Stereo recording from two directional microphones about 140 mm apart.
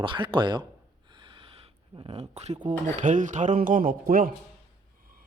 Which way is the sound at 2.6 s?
65° right (ahead or behind).